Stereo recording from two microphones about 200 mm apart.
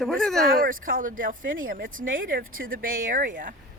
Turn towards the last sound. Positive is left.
turn(degrees=-40)  # may be behind; listen again after turning